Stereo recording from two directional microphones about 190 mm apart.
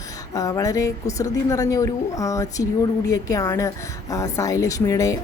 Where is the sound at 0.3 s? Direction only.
20° left (ahead or behind).